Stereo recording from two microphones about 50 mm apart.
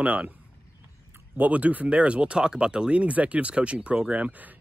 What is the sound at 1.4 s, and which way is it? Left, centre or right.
Speech, right.